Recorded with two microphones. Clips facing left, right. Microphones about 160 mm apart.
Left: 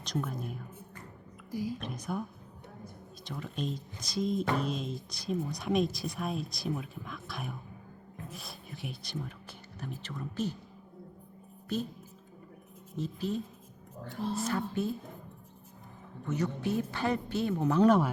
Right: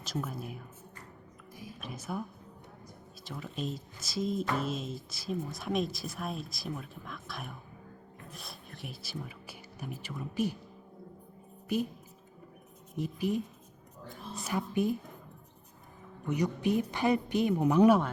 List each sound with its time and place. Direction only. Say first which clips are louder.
0.0 s speech: left 2 dB; 5° right (ahead or behind)
1.5 s a woman's voice: left 13 dB; 75° left (ahead or behind)
1.8 s speech: left 2 dB; 5° right (ahead or behind)
3.2 s speech: left 1 dB; centre (ahead or behind)
11.7 s speech: right 3 dB; 10° right (ahead or behind)
13.0 s speech: right 2 dB; 15° right (ahead or behind)
14.0 s a woman's voice: left 9 dB; 70° left (ahead or behind)
14.7 s speech: right 3 dB; 15° right (ahead or behind)
16.2 s speech: right 2 dB; 15° right (ahead or behind)